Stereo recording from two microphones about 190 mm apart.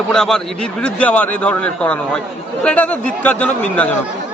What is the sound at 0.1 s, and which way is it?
A man's voice, 5° left (ahead or behind).